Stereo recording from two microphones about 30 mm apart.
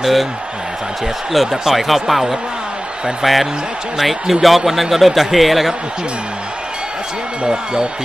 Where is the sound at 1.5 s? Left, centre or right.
Centre.